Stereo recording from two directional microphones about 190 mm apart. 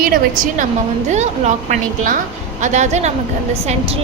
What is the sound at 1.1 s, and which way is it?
A woman's voice, 35° right (ahead or behind).